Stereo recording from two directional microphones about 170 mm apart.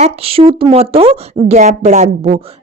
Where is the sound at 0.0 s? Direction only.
35° right (ahead or behind).